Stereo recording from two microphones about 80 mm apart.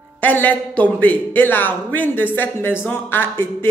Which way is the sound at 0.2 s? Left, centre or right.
Left.